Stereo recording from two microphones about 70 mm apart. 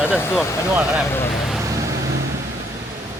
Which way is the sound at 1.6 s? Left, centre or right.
Right.